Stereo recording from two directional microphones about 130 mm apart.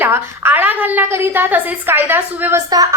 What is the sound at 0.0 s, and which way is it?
A woman's voice, 15° right (ahead or behind).